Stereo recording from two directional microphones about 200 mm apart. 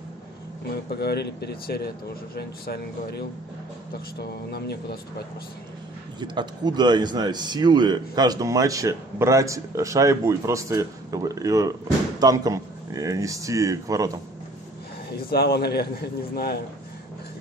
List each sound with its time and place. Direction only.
0.8 s a man's voice: 55° left (ahead or behind)
6.1 s speech: 20° right (ahead or behind)
15.1 s a man's voice: 50° left (ahead or behind)